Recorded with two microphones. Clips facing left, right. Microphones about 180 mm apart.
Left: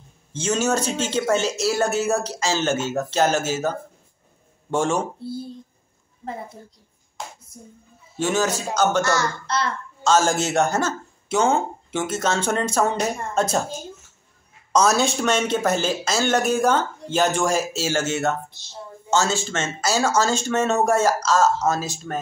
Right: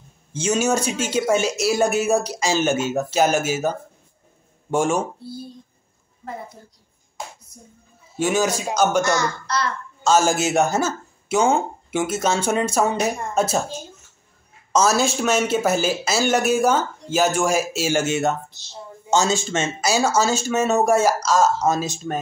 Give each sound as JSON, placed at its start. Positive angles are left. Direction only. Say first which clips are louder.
{"t": 0.3, "sound": "speech", "louder": "right 2 dB", "side_deg": -10}
{"t": 7.5, "sound": "speech", "louder": "left 3 dB", "side_deg": 25}
{"t": 8.2, "sound": "speech", "louder": "right 2 dB", "side_deg": -10}
{"t": 14.7, "sound": "speech", "louder": "even", "side_deg": 0}